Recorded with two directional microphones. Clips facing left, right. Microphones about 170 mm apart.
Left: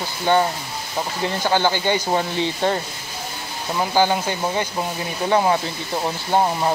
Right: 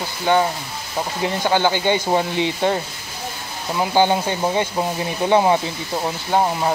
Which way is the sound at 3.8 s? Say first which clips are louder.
Right 2 dB; 20° right (ahead or behind).